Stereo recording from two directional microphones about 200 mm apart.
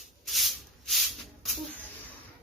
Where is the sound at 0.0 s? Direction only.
Centre (ahead or behind).